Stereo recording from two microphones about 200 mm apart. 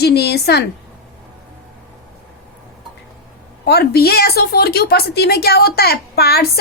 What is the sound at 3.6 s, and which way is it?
A woman's voice, 55° left (ahead or behind).